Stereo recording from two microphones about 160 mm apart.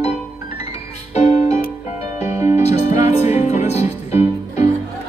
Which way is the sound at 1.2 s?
45° left (ahead or behind).